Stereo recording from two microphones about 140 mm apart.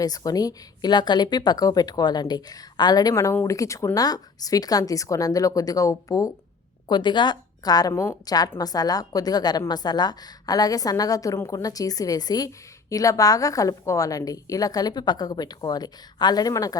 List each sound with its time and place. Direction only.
0.0 s a woman's voice: 25° left (ahead or behind)